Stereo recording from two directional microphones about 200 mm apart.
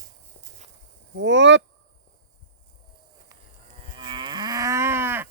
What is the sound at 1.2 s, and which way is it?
Speech, 65° right (ahead or behind).